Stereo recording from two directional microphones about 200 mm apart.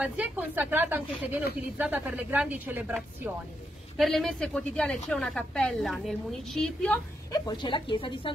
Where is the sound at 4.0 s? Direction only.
Centre (ahead or behind).